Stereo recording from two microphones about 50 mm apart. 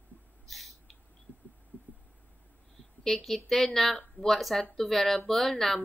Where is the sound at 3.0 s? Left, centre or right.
Centre.